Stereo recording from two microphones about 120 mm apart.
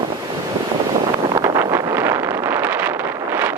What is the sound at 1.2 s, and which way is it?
Wind noise, 30° right (ahead or behind).